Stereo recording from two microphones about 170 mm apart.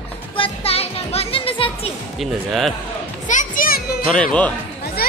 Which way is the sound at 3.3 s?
50° left (ahead or behind).